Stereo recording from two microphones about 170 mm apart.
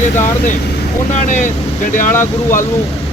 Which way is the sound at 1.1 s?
45° left (ahead or behind).